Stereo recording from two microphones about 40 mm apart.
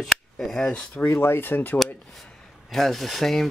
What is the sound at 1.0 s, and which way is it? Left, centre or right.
Speech, left.